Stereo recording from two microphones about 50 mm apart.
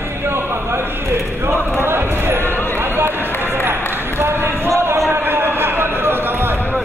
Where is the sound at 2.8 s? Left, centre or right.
Right.